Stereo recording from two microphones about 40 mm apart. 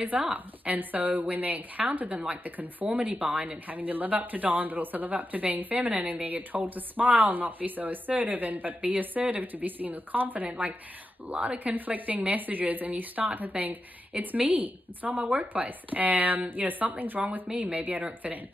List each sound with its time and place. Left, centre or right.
0.2 s a woman's voice: right
0.7 s speech: right
3.0 s a woman's voice: right